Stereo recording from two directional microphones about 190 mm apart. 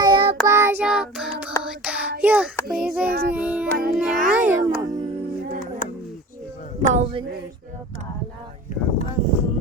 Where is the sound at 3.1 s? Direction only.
55° right (ahead or behind).